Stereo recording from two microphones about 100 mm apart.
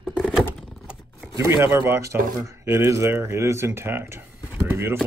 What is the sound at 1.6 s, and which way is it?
Speech, 25° right (ahead or behind).